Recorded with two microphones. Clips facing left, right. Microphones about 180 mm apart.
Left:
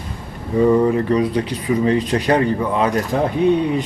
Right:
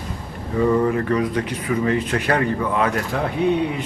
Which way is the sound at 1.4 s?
35° left (ahead or behind).